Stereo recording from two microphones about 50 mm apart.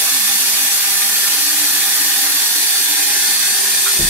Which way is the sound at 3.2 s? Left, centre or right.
Centre.